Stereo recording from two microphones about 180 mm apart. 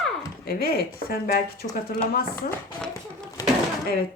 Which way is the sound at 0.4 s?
60° left (ahead or behind).